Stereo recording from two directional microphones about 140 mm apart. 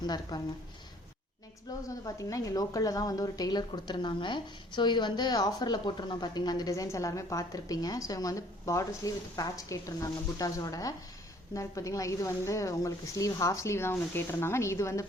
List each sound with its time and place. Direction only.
0.0 s a woman's voice: 30° left (ahead or behind)
1.7 s a woman's voice: 25° left (ahead or behind)